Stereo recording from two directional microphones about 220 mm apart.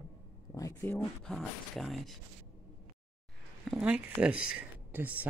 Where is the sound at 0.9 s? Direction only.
Centre (ahead or behind).